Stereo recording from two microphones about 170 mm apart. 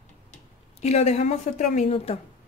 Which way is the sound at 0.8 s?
40° left (ahead or behind).